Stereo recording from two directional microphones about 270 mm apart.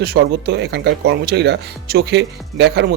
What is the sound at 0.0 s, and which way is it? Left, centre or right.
Speech, right.